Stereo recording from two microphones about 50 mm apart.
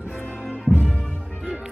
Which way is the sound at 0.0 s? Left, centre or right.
Left.